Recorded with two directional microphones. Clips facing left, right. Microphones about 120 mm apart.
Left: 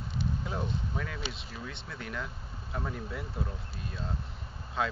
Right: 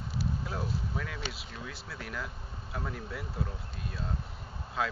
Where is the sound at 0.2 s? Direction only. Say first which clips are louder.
Left 1 dB; 5° right (ahead or behind).